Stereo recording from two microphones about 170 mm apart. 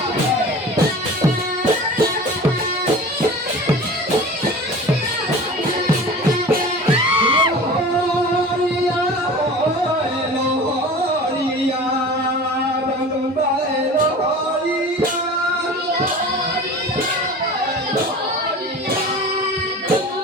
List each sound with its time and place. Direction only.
7.2 s music: 30° right (ahead or behind)